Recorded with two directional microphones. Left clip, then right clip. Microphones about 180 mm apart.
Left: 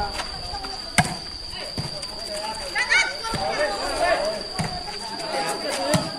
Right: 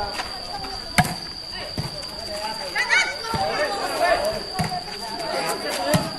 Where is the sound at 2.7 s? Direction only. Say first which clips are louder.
Even; 15° left (ahead or behind).